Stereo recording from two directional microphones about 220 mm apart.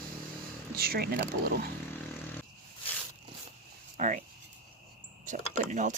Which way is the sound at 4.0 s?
35° right (ahead or behind).